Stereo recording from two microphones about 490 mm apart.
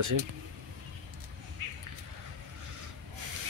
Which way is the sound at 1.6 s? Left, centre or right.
Right.